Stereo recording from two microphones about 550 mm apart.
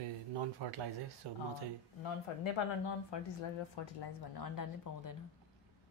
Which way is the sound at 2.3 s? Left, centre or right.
Left.